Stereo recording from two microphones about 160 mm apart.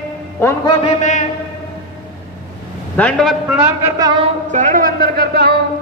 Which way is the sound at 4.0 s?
25° right (ahead or behind).